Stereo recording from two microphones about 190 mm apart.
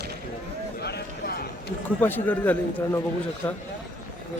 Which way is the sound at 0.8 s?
60° left (ahead or behind).